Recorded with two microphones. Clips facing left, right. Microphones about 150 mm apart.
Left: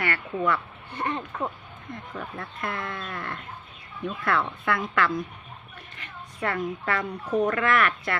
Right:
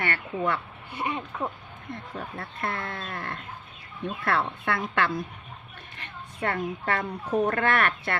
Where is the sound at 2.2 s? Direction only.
35° right (ahead or behind).